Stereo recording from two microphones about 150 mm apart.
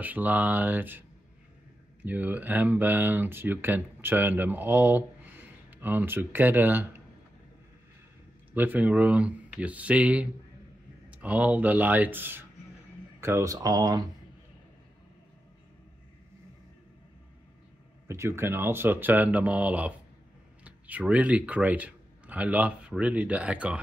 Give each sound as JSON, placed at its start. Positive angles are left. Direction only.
{"t": 0.0, "sound": "speech", "side_deg": -10}
{"t": 2.0, "sound": "speech", "side_deg": -10}
{"t": 8.5, "sound": "speech", "side_deg": -10}
{"t": 18.0, "sound": "speech", "side_deg": -20}